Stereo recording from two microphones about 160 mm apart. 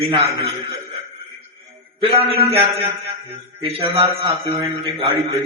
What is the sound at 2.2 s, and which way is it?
A man's voice, 35° right (ahead or behind).